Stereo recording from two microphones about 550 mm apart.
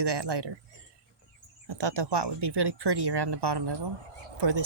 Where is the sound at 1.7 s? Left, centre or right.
Right.